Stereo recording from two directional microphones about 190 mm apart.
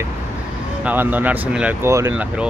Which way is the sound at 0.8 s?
10° right (ahead or behind).